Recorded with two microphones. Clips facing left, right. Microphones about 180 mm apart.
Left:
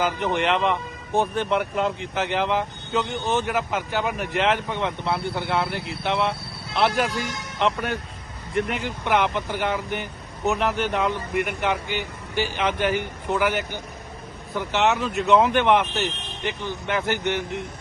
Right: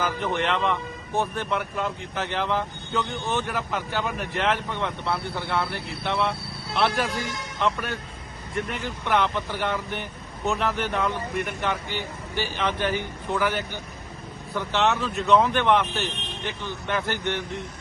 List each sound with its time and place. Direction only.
0.0 s a man's voice: 20° left (ahead or behind)